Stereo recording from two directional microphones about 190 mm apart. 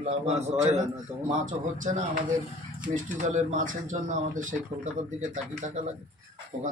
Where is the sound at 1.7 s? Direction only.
45° right (ahead or behind).